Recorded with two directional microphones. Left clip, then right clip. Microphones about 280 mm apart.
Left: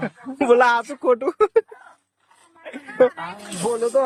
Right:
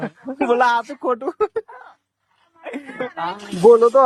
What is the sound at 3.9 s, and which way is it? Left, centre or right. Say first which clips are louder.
Speech: right 6 dB; centre.